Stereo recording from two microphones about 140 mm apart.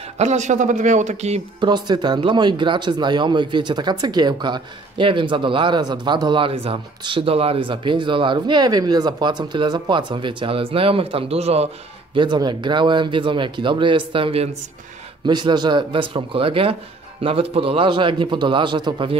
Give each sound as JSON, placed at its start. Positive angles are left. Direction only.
{"t": 0.2, "sound": "speech", "side_deg": -55}
{"t": 1.6, "sound": "speech", "side_deg": -30}
{"t": 12.2, "sound": "speech", "side_deg": -35}